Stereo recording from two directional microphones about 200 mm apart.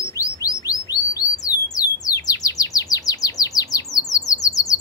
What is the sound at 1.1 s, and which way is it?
Bird, 20° left (ahead or behind).